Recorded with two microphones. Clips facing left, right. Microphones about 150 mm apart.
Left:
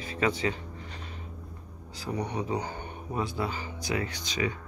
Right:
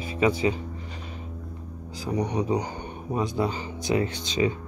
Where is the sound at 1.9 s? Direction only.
15° right (ahead or behind).